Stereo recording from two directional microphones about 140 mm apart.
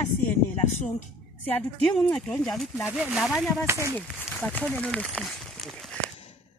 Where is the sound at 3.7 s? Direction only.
20° right (ahead or behind).